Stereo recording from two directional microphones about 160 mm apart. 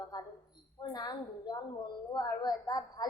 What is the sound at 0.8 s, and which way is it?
A woman's voice, 25° left (ahead or behind).